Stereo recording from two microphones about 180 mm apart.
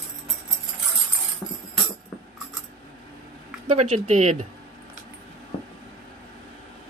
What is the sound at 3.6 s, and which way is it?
Speech, 40° right (ahead or behind).